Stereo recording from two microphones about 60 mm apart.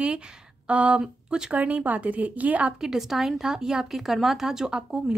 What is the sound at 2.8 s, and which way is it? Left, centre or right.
Speech, centre.